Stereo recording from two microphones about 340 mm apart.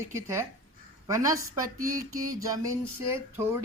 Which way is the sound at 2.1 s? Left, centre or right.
Right.